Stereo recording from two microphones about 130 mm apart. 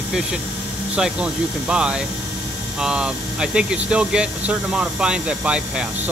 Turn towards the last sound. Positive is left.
turn(degrees=-10)  # may be behind; listen again after turning